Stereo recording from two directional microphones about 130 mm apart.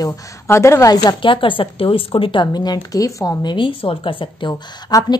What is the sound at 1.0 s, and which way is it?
A woman's voice, 40° left (ahead or behind).